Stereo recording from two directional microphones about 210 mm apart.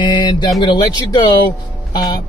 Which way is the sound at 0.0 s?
20° left (ahead or behind).